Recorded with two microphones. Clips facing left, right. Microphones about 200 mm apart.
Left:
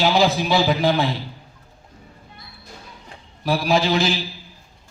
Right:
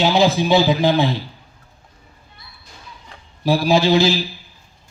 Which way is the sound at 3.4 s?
25° right (ahead or behind).